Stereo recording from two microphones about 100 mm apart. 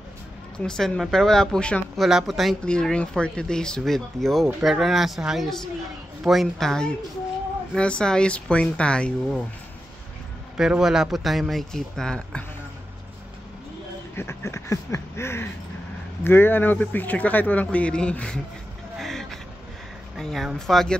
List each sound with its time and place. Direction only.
0.6 s speech: 5° left (ahead or behind)
10.6 s speech: 5° right (ahead or behind)
14.1 s speech: 25° left (ahead or behind); by 18.4 s 10° left (ahead or behind)
18.9 s a sound: 5° left (ahead or behind)
20.2 s speech: centre (ahead or behind)